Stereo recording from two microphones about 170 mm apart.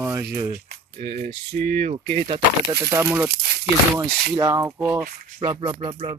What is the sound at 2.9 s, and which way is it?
Speech, 10° right (ahead or behind).